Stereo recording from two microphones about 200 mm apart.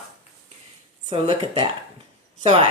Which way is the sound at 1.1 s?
25° right (ahead or behind).